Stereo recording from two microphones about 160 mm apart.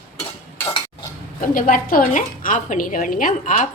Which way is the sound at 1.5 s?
60° left (ahead or behind).